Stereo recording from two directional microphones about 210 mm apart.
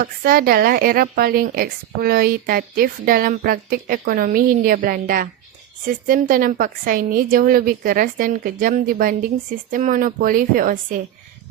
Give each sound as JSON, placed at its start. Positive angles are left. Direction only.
{"t": 0.0, "sound": "a woman's voice", "side_deg": -45}